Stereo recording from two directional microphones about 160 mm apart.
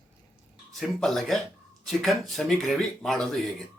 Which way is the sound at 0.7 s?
Centre (ahead or behind).